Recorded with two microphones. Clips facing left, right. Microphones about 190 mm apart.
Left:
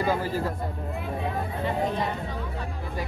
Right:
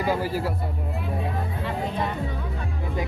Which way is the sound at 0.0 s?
10° right (ahead or behind).